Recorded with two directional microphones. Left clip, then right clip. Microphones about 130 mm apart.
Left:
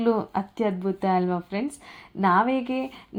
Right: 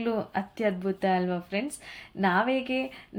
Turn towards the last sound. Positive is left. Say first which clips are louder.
# left 1 dB
turn(degrees=30)  # may be behind; listen again after turning